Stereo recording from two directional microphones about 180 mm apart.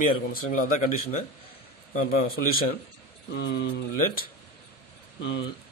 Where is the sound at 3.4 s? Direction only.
65° left (ahead or behind).